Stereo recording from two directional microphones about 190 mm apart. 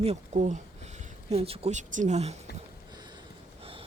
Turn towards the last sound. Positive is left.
turn(degrees=-30)  # may be behind; listen again after turning